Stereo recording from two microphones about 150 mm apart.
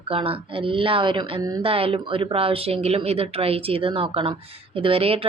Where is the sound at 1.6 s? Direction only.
40° right (ahead or behind).